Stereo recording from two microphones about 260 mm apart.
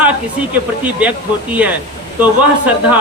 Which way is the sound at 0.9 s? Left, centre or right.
Centre.